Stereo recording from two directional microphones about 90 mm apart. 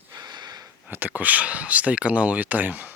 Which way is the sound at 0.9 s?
20° right (ahead or behind).